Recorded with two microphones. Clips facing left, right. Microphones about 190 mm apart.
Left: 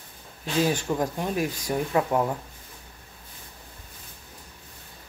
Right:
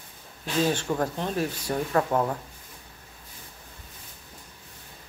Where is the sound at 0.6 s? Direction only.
10° left (ahead or behind).